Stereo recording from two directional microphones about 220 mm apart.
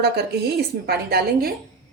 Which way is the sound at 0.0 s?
45° right (ahead or behind).